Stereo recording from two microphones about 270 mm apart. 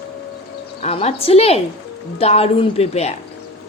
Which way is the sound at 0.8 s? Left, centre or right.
Left.